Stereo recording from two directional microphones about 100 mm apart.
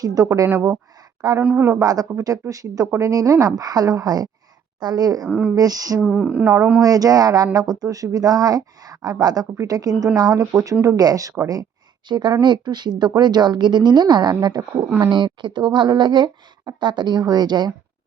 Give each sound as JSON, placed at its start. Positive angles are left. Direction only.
{"t": 0.0, "sound": "speech", "side_deg": -35}
{"t": 1.4, "sound": "speech", "side_deg": -20}
{"t": 1.8, "sound": "speech", "side_deg": -40}
{"t": 5.2, "sound": "speech", "side_deg": -10}
{"t": 5.5, "sound": "speech", "side_deg": -40}
{"t": 6.0, "sound": "speech", "side_deg": -5}
{"t": 6.8, "sound": "speech", "side_deg": -35}
{"t": 12.0, "sound": "speech", "side_deg": -45}
{"t": 14.8, "sound": "speech", "side_deg": -25}
{"t": 15.1, "sound": "speech", "side_deg": -50}